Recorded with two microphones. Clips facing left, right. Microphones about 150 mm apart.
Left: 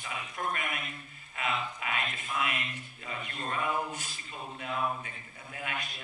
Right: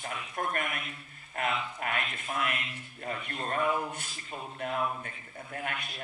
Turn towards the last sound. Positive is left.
turn(degrees=-50)  # may be behind; listen again after turning